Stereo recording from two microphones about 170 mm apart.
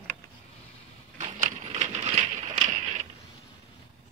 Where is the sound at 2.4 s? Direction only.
45° right (ahead or behind).